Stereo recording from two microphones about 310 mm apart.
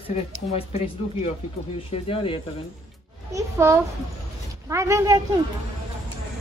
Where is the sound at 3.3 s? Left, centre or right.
Centre.